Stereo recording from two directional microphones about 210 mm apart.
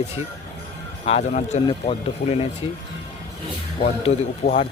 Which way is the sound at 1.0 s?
30° left (ahead or behind).